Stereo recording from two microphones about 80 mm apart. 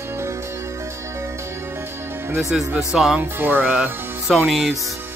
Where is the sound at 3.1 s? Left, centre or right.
Right.